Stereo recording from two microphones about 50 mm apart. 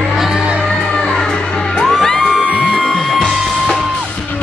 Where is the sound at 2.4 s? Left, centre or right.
Right.